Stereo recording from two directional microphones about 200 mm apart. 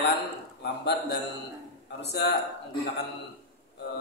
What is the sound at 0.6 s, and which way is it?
A man's voice, 55° left (ahead or behind).